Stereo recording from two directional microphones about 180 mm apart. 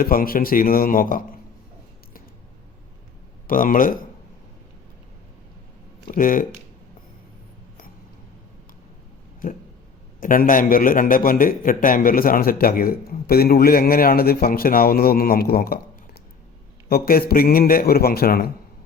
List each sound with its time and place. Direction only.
0.0 s a man's voice: 55° left (ahead or behind)
3.4 s a man's voice: 50° left (ahead or behind)
6.1 s a man's voice: 50° left (ahead or behind)
10.2 s a man's voice: 50° left (ahead or behind)
16.9 s a man's voice: 55° left (ahead or behind)